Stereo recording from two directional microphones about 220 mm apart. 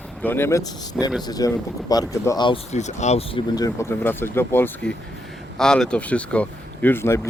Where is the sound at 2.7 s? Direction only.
30° left (ahead or behind).